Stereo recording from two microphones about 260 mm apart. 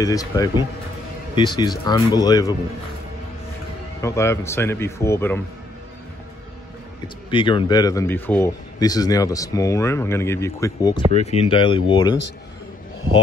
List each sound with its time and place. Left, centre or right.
0.0 s speech: centre
4.0 s speech: centre
7.2 s speech: centre
11.1 s speech: left